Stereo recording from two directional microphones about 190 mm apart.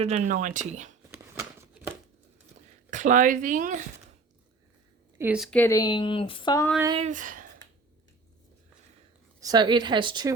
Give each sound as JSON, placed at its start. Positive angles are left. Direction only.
{"t": 0.0, "sound": "speech", "side_deg": -40}
{"t": 1.4, "sound": "a sound", "side_deg": -15}
{"t": 2.9, "sound": "speech", "side_deg": -40}
{"t": 5.1, "sound": "speech", "side_deg": -10}
{"t": 5.5, "sound": "speech", "side_deg": 10}
{"t": 6.9, "sound": "speech", "side_deg": -40}
{"t": 9.4, "sound": "speech", "side_deg": -20}